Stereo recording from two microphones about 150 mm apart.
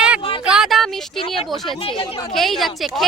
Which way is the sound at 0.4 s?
5° right (ahead or behind).